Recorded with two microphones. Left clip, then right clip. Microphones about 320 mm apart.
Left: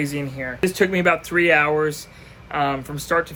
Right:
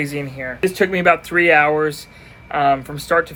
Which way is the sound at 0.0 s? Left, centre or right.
Centre.